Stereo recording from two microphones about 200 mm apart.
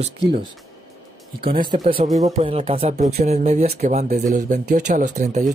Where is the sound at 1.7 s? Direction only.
25° right (ahead or behind).